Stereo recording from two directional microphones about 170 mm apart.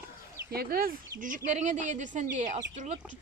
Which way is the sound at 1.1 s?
50° right (ahead or behind).